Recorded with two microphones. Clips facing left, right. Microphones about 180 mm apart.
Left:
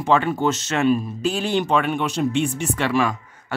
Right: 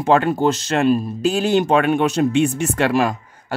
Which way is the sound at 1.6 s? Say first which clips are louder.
Right 5 dB; 45° right (ahead or behind).